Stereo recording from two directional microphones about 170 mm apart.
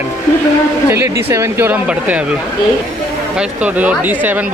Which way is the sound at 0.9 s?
15° right (ahead or behind).